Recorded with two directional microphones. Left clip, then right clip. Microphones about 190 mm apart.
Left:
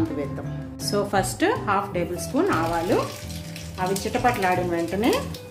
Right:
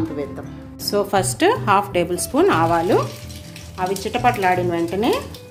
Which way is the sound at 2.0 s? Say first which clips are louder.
Right 6 dB; 40° right (ahead or behind).